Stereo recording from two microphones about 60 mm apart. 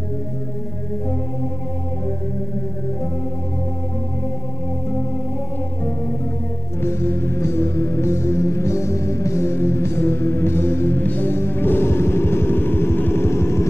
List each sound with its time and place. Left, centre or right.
6.8 s music: left